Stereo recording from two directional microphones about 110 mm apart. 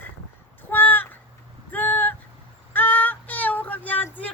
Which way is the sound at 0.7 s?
15° left (ahead or behind).